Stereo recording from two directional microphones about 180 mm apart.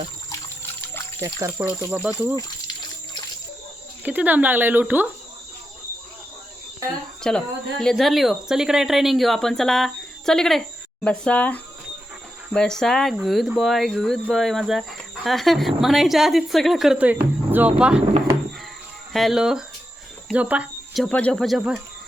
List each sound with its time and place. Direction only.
0.3 s water: 15° left (ahead or behind)
1.2 s speech: 15° right (ahead or behind)
4.0 s speech: 10° right (ahead or behind)
7.2 s speech: 5° left (ahead or behind)
19.1 s speech: centre (ahead or behind)